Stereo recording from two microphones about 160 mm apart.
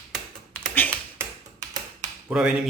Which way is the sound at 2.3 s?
5° right (ahead or behind).